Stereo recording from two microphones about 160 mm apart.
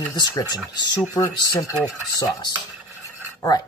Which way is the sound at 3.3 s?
20° left (ahead or behind).